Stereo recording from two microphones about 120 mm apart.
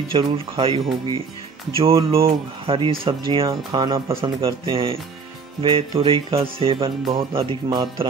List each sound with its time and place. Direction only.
0.1 s speech: 50° right (ahead or behind)
3.4 s speech: 35° right (ahead or behind)
4.1 s speech: 50° right (ahead or behind)